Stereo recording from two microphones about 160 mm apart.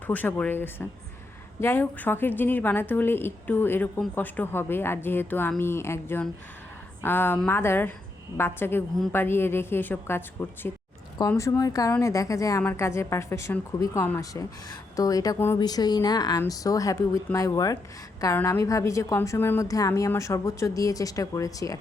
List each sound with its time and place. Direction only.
0.1 s a woman's voice: 10° left (ahead or behind)